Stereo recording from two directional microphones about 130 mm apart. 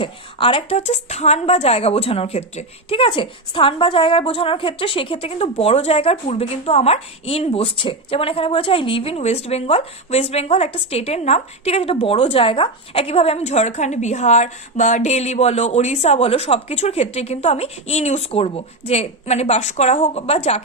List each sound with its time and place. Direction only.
0.0 s speech: 40° left (ahead or behind)